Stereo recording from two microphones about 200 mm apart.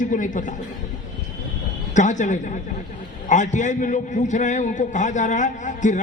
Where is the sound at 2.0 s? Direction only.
40° left (ahead or behind).